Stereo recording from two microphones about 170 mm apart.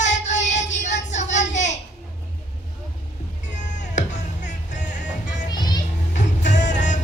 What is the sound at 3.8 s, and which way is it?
Music, 45° left (ahead or behind).